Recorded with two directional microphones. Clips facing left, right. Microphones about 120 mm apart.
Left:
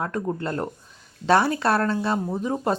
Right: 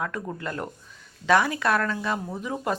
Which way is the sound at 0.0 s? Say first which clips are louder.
Left 4 dB; 35° left (ahead or behind).